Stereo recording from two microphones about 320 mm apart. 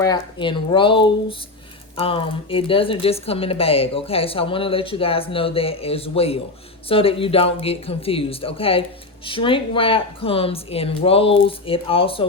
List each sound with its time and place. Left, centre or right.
0.0 s speech: centre